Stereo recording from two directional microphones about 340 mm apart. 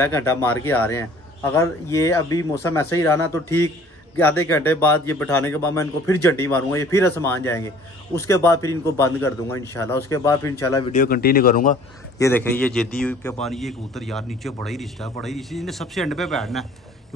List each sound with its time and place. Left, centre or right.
0.0 s a man's voice: centre
10.9 s speech: left
12.2 s a man's voice: centre